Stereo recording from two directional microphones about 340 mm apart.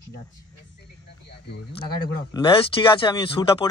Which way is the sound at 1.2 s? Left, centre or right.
Left.